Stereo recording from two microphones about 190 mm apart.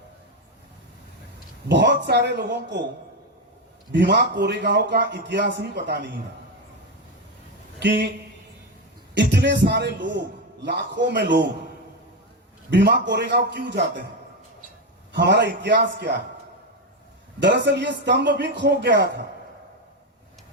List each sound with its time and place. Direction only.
1.6 s a man's voice: 65° right (ahead or behind)
3.9 s a man's voice: 65° right (ahead or behind)
7.8 s speech: 65° right (ahead or behind)
9.1 s a man's voice: 65° right (ahead or behind)
12.7 s a man's voice: 65° right (ahead or behind)
15.1 s a man's voice: 65° right (ahead or behind)
17.4 s a man's voice: 65° right (ahead or behind)